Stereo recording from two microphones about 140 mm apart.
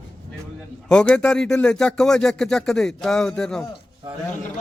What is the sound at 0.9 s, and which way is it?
Speech, 5° left (ahead or behind).